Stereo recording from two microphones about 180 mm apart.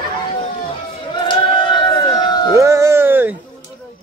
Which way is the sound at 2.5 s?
15° right (ahead or behind).